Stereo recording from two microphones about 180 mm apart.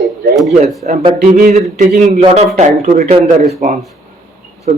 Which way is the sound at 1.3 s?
50° right (ahead or behind).